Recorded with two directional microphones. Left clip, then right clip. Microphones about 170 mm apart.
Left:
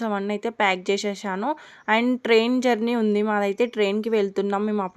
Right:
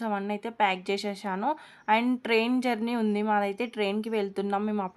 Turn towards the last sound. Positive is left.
turn(degrees=20)  # may be behind; listen again after turning